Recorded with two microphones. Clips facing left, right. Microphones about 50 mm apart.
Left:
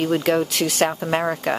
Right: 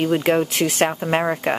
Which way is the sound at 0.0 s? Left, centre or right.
Centre.